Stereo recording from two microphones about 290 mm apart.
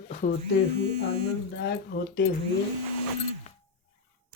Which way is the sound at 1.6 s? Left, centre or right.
Left.